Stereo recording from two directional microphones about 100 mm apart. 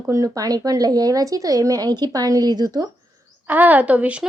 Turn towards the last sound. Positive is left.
turn(degrees=-15)  # may be behind; listen again after turning